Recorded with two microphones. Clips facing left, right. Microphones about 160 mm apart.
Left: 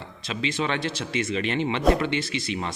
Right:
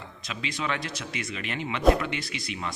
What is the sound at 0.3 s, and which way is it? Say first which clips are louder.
Speech: left 5 dB; 25° left (ahead or behind).